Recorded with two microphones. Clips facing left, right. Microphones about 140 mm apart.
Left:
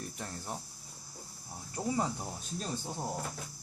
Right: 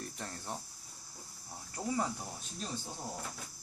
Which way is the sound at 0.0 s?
5° left (ahead or behind).